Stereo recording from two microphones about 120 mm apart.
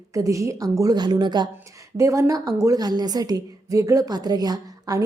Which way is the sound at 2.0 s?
25° right (ahead or behind).